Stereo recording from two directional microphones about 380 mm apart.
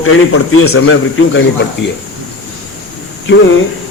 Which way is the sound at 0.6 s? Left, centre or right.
Left.